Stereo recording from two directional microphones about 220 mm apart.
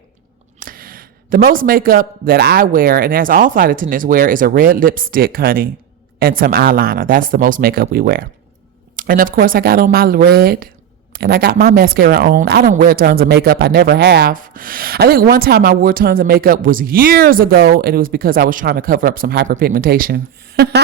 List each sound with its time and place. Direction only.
0.6 s speech: 40° right (ahead or behind)